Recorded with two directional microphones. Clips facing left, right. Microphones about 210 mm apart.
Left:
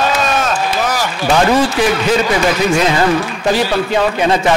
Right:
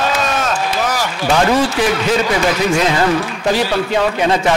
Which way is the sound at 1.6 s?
10° left (ahead or behind).